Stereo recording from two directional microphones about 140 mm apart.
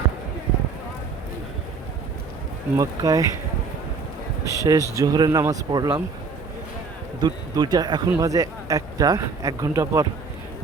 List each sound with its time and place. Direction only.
2.7 s speech: 25° right (ahead or behind)
4.4 s speech: 25° right (ahead or behind)
7.2 s speech: 30° right (ahead or behind)